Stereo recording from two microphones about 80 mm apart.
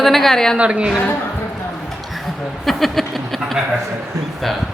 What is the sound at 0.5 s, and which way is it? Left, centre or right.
Speech, centre.